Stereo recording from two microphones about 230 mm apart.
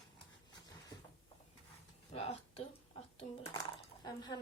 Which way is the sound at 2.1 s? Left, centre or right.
Left.